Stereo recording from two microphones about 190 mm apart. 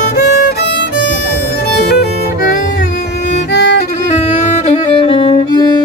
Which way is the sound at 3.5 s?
65° left (ahead or behind).